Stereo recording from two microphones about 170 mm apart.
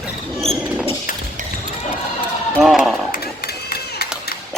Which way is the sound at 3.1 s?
65° left (ahead or behind).